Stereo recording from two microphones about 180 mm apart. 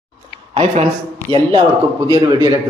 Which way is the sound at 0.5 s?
35° right (ahead or behind).